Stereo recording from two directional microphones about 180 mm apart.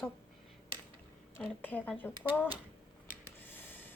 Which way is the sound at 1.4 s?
10° left (ahead or behind).